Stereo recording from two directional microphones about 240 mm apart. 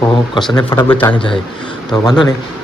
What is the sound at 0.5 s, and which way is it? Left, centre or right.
A man's voice, centre.